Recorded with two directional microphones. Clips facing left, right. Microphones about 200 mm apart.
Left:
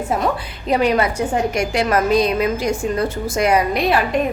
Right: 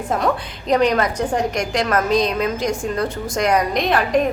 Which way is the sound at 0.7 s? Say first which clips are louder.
Even; 5° left (ahead or behind).